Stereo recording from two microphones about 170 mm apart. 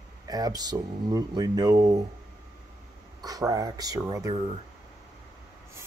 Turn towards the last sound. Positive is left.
turn(degrees=-20)  # may be behind; listen again after turning